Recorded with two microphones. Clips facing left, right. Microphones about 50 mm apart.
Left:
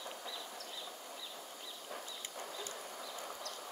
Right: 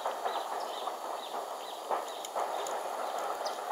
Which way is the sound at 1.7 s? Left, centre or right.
Right.